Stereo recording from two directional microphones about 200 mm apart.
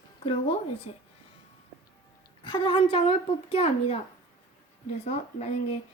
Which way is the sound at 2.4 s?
25° left (ahead or behind).